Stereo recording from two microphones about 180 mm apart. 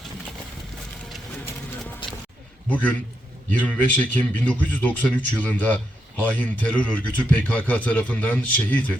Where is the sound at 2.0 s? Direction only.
30° left (ahead or behind).